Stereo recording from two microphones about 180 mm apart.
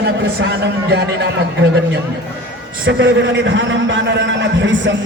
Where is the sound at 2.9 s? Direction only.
90° right.